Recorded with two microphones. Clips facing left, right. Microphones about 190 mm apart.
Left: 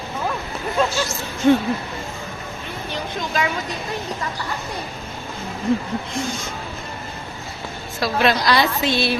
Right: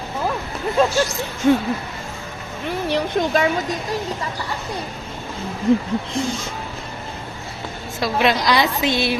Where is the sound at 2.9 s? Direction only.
60° right (ahead or behind).